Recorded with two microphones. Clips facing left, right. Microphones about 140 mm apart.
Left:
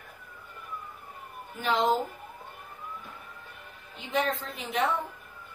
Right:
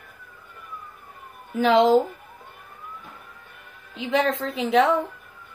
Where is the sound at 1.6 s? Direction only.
90° right.